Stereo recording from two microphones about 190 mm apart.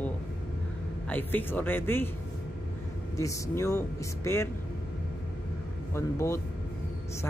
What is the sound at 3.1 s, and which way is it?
A man's voice, 15° left (ahead or behind).